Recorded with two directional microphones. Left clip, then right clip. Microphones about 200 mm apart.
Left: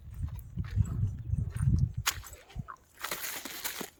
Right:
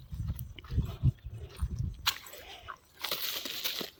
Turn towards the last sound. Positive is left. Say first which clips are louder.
# right 4 dB
turn(degrees=30)  # may be behind; listen again after turning